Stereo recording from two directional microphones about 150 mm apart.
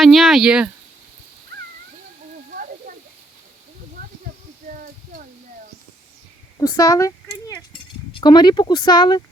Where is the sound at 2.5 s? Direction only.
70° right (ahead or behind).